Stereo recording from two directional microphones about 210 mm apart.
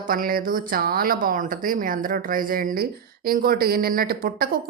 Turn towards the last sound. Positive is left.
turn(degrees=-45)  # may be behind; listen again after turning